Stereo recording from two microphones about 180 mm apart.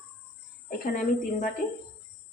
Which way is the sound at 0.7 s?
45° left (ahead or behind).